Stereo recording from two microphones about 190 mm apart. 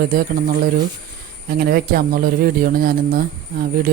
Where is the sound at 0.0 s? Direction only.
50° right (ahead or behind).